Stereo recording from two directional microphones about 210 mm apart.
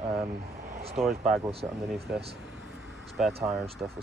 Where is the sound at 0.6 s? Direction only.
35° right (ahead or behind).